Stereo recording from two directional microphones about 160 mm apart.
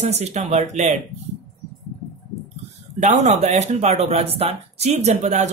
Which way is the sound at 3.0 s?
45° right (ahead or behind).